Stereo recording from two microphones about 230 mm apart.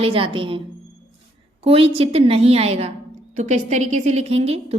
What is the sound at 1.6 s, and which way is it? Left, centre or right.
A woman's voice, right.